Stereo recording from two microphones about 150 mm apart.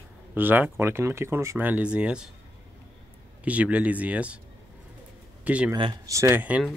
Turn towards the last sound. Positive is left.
turn(degrees=-10)  # may be behind; listen again after turning